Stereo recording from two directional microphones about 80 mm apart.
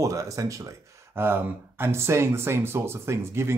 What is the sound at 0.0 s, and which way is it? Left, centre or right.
Speech, right.